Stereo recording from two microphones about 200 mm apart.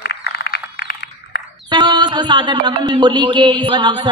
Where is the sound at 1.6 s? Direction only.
20° right (ahead or behind).